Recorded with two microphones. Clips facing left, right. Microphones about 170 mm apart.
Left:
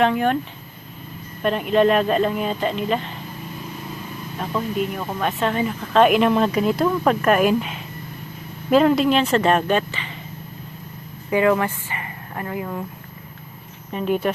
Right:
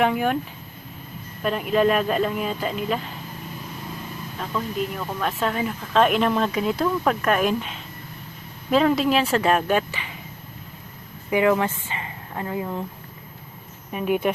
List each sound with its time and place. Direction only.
0.0 s speech: 10° right (ahead or behind)
1.4 s speech: centre (ahead or behind)
4.4 s speech: 10° left (ahead or behind); by 10.1 s 10° right (ahead or behind)
11.3 s speech: 15° right (ahead or behind)
13.9 s speech: 10° right (ahead or behind)